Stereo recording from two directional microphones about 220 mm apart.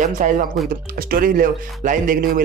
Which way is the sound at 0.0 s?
35° right (ahead or behind).